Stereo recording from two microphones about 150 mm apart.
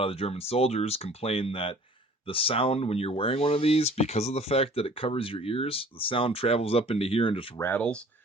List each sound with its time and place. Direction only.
0.0 s speech: 40° left (ahead or behind)
7.6 s speech: 10° left (ahead or behind)